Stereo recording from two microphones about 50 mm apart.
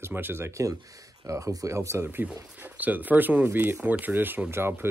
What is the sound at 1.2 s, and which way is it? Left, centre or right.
Speech, right.